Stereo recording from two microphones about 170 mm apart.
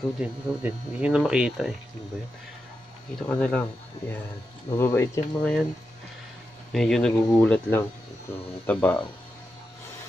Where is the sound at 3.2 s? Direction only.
5° left (ahead or behind).